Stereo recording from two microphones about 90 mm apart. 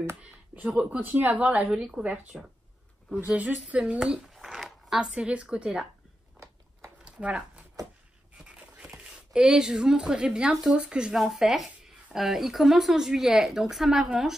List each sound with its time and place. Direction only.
0.2 s speech: 10° right (ahead or behind)
1.7 s speech: 5° right (ahead or behind)
3.1 s speech: 15° right (ahead or behind)
7.1 s a sound: 10° right (ahead or behind)
10.8 s speech: 10° right (ahead or behind)